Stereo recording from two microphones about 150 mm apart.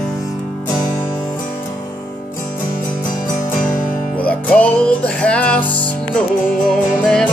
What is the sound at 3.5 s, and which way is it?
Music, 65° left (ahead or behind).